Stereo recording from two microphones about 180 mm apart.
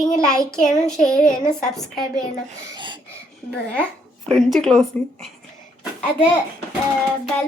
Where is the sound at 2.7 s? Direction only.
25° right (ahead or behind).